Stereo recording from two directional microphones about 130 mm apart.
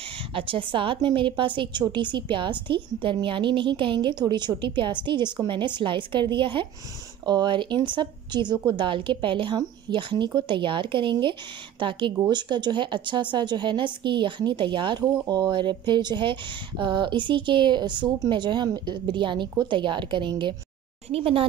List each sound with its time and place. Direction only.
0.3 s a woman's voice: 45° right (ahead or behind)